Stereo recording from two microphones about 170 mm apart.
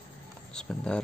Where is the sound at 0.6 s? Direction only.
5° left (ahead or behind).